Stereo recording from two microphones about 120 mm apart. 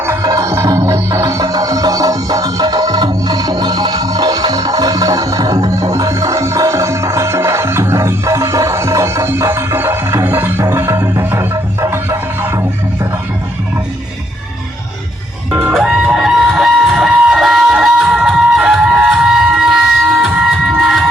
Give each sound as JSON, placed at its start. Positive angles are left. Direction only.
{"t": 0.0, "sound": "music", "side_deg": -25}
{"t": 15.6, "sound": "music", "side_deg": -5}